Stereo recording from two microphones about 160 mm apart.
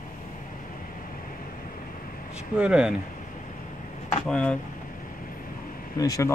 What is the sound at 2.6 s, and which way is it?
Speech, 5° right (ahead or behind).